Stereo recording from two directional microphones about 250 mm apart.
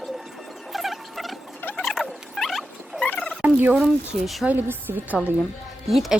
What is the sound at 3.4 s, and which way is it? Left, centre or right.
A woman's voice, centre.